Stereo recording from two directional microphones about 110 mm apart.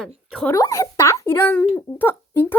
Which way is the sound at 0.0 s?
5° left (ahead or behind).